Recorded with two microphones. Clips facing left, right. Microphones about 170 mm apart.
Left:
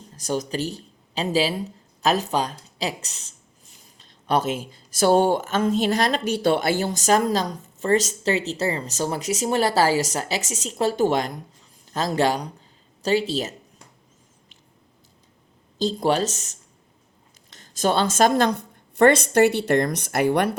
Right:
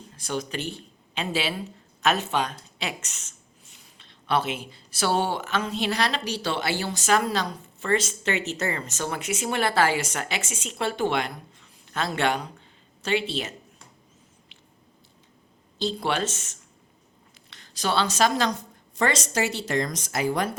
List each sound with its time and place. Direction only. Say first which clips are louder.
0.2 s speech: left 5 dB; 40° left (ahead or behind)
15.8 s a woman's voice: left 5 dB; 40° left (ahead or behind); by 20.6 s 65° left (ahead or behind)